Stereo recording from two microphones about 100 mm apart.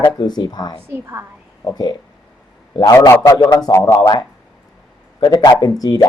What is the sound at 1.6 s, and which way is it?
Speech, 45° left (ahead or behind).